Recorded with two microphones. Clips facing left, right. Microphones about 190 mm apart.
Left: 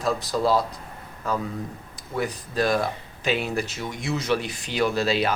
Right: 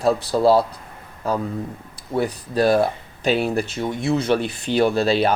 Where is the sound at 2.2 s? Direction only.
30° right (ahead or behind).